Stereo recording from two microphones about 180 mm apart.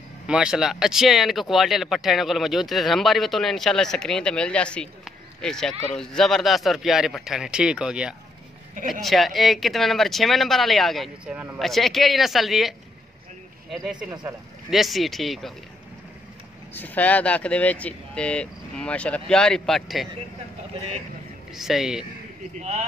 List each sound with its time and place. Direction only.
0.3 s speech: 5° right (ahead or behind)
16.7 s speech: 10° left (ahead or behind)
21.5 s speech: centre (ahead or behind)
22.6 s speech: 40° right (ahead or behind)